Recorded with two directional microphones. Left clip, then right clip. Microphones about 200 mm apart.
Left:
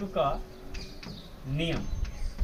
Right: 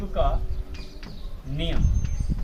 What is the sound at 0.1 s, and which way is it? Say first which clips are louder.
Speech: right 2 dB; 15° left (ahead or behind).